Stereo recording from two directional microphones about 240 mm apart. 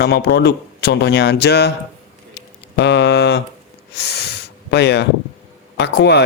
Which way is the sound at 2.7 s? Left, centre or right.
Left.